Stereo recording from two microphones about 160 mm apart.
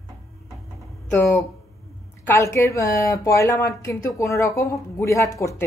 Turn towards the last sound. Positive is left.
turn(degrees=20)  # may be behind; listen again after turning